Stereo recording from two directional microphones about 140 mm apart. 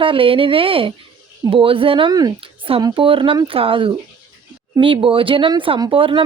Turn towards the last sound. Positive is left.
turn(degrees=-40)  # may be behind; listen again after turning